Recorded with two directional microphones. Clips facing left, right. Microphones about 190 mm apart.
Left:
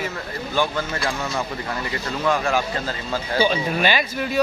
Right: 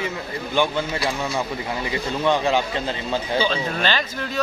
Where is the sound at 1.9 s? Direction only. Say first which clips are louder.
Right 2 dB; 20° right (ahead or behind).